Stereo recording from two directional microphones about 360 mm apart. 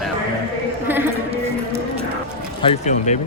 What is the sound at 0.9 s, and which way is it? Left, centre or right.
Music, centre.